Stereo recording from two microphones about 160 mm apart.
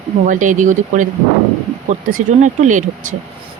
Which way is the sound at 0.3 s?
55° right (ahead or behind).